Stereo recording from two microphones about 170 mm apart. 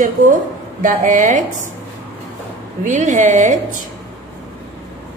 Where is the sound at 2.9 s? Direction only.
45° right (ahead or behind).